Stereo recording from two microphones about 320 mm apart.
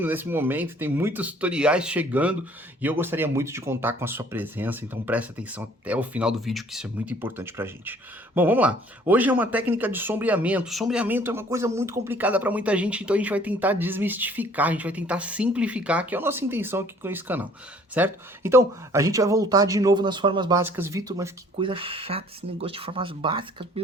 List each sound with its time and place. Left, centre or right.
0.0 s speech: centre